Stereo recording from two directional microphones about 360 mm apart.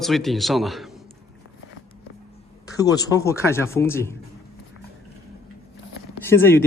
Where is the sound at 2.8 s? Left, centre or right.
Centre.